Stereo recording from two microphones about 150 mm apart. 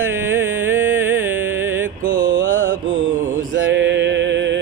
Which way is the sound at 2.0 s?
65° right (ahead or behind).